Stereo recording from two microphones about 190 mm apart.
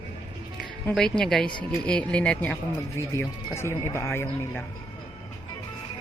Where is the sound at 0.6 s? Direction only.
5° left (ahead or behind).